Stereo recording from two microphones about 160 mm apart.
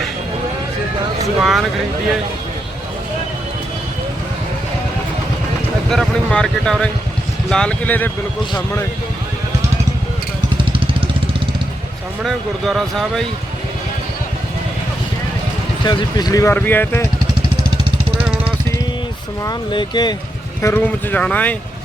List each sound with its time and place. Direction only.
1.4 s speech: centre (ahead or behind)
5.9 s speech: 5° left (ahead or behind); by 8.9 s 20° left (ahead or behind)
10.6 s vehicle: 35° right (ahead or behind)
12.2 s speech: centre (ahead or behind)
15.8 s speech: 25° left (ahead or behind)
19.5 s speech: 30° left (ahead or behind)
20.6 s speech: 15° left (ahead or behind)